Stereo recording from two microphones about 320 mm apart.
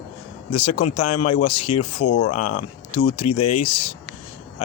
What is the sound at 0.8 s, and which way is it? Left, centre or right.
Speech, left.